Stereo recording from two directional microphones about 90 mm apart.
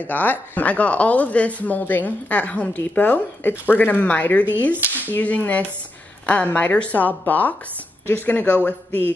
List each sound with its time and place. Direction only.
0.0 s speech: 20° left (ahead or behind)